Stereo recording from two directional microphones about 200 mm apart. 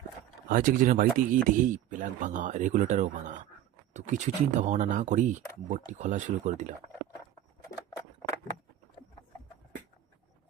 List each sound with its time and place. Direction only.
0.4 s speech: 40° right (ahead or behind)